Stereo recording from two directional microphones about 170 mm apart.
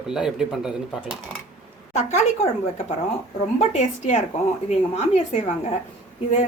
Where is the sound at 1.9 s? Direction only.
40° left (ahead or behind).